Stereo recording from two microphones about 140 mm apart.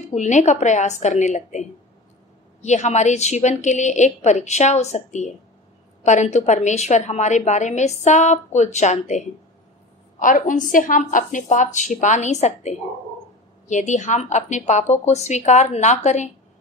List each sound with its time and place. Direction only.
0.1 s a woman's voice: 55° left (ahead or behind)
10.1 s a woman's voice: 70° left (ahead or behind)